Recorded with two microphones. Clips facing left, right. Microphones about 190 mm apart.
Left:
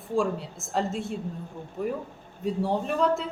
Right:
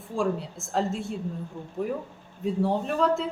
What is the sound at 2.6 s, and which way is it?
Speech, centre (ahead or behind).